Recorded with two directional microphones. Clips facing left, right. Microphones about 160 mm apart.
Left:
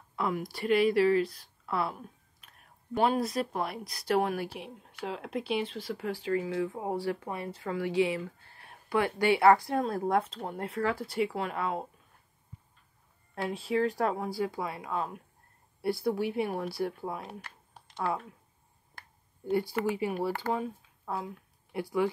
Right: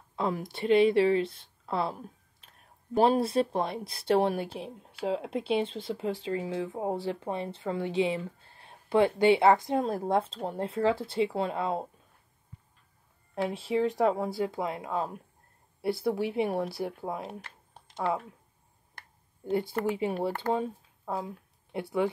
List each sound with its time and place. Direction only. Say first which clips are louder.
0.1 s speech: right 1 dB; 25° right (ahead or behind)
13.8 s speech: right 3 dB; 20° right (ahead or behind)
19.4 s speech: even; 25° right (ahead or behind)